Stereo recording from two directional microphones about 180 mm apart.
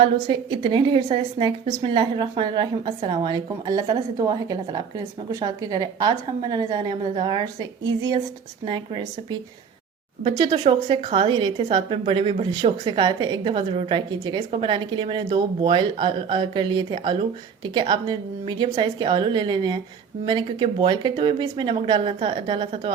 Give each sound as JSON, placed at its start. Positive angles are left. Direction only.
{"t": 0.0, "sound": "a woman's voice", "side_deg": -25}
{"t": 10.2, "sound": "a woman's voice", "side_deg": -30}